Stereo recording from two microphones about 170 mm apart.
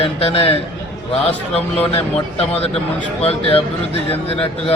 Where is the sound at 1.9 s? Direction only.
35° left (ahead or behind).